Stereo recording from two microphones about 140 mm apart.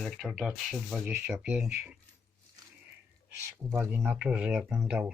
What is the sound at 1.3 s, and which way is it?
Speech, 5° right (ahead or behind).